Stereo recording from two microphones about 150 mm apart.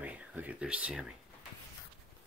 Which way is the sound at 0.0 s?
10° right (ahead or behind).